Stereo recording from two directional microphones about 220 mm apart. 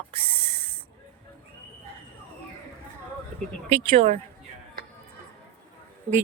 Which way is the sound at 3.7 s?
30° right (ahead or behind).